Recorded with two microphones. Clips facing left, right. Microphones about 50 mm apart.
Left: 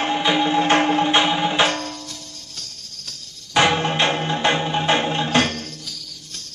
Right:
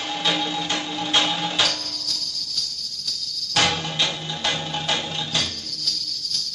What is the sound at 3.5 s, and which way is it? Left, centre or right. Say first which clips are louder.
Music: left 5 dB; left.